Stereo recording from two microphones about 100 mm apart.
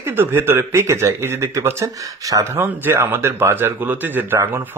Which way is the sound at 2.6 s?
20° right (ahead or behind).